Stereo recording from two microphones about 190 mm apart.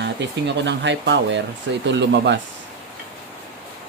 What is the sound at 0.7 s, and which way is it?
Speech, 70° right (ahead or behind).